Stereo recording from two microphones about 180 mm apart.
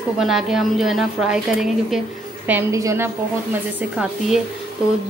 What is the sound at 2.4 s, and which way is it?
Speech, 15° right (ahead or behind).